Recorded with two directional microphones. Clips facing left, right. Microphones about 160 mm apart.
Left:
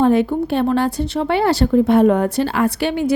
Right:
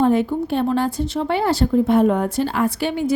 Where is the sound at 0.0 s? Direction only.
75° left (ahead or behind).